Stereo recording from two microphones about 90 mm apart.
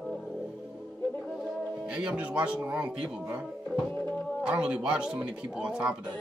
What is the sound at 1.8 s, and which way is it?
Speech, 10° right (ahead or behind).